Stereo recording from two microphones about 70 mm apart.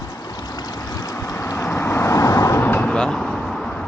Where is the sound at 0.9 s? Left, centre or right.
Left.